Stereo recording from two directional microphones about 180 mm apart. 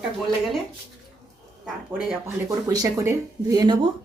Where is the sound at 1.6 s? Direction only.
Centre (ahead or behind).